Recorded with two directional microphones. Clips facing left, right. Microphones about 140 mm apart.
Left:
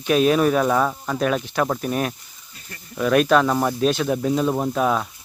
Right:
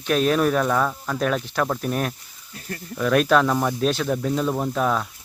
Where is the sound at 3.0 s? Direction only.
Centre (ahead or behind).